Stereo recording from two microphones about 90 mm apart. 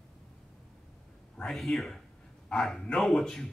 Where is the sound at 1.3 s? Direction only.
5° left (ahead or behind).